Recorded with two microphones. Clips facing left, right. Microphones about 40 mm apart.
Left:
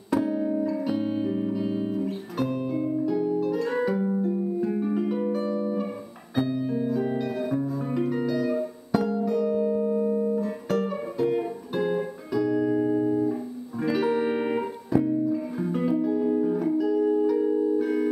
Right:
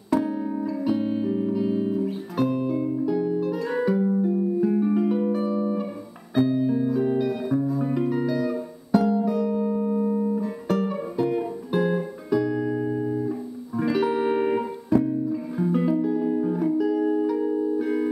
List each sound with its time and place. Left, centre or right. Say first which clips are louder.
0.2 s music: left 1 dB; centre